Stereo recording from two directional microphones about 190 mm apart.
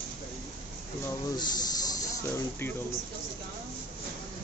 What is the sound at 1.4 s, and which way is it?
Snake, 20° left (ahead or behind).